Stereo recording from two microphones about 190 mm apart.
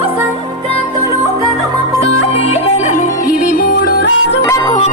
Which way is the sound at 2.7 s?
40° left (ahead or behind).